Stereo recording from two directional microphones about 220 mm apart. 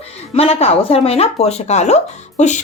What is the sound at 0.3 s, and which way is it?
Speech, 25° left (ahead or behind).